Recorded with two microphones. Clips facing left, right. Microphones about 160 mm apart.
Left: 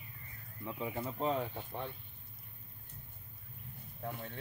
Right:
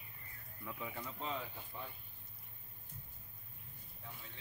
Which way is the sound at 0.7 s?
30° left (ahead or behind).